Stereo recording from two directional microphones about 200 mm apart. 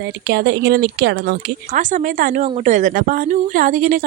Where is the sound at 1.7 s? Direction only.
40° right (ahead or behind).